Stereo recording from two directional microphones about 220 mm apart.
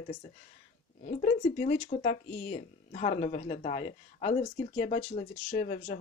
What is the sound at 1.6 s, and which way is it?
Speech, 35° left (ahead or behind).